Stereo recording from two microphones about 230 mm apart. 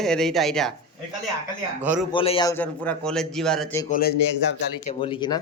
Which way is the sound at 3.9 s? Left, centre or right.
Left.